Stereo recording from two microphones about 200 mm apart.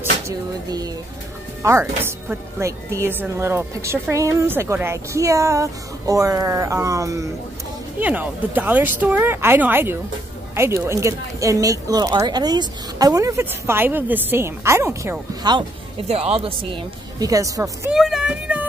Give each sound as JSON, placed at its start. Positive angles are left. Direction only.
{"t": 0.7, "sound": "a woman's voice", "side_deg": -20}
{"t": 16.1, "sound": "speech", "side_deg": -30}
{"t": 17.9, "sound": "speech", "side_deg": 0}